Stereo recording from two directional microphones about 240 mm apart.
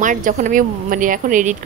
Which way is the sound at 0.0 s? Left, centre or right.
Right.